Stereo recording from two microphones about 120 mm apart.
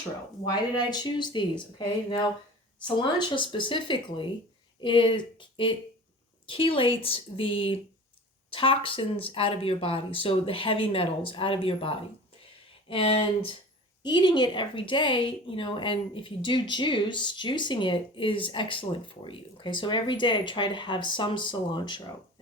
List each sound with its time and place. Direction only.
0.9 s speech: 35° left (ahead or behind)
2.8 s a woman's voice: 40° left (ahead or behind)
14.0 s a woman's voice: 40° left (ahead or behind)